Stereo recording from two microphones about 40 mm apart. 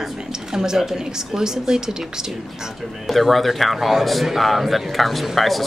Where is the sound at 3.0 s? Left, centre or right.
Centre.